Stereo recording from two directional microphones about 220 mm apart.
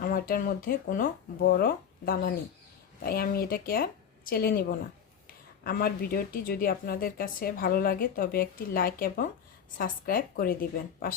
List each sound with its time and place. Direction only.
0.0 s speech: 40° left (ahead or behind)
5.6 s speech: 40° left (ahead or behind)